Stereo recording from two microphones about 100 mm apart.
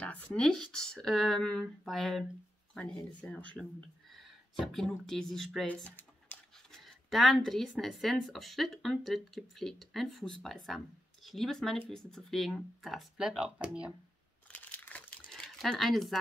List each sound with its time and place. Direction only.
0.0 s speech: 10° left (ahead or behind)
4.1 s speech: centre (ahead or behind)
5.7 s computer keyboard: 20° left (ahead or behind)
6.5 s speech: 5° left (ahead or behind)
14.5 s crumpling: 15° left (ahead or behind)
15.3 s speech: 5° left (ahead or behind)